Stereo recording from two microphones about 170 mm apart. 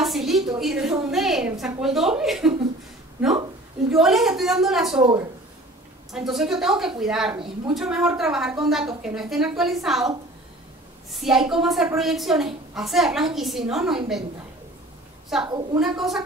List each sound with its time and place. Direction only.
0.0 s a sound: centre (ahead or behind)
0.6 s a woman's voice: centre (ahead or behind)
3.9 s a woman's voice: centre (ahead or behind)
6.1 s a woman's voice: centre (ahead or behind)
11.2 s a woman's voice: 5° right (ahead or behind)
15.4 s a woman's voice: 25° right (ahead or behind)
15.8 s a woman's voice: centre (ahead or behind)